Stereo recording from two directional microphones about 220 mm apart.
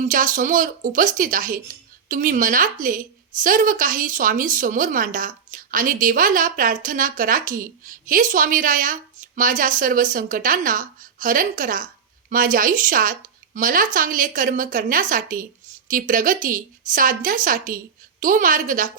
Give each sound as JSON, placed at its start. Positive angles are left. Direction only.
{"t": 0.0, "sound": "a woman's voice", "side_deg": -35}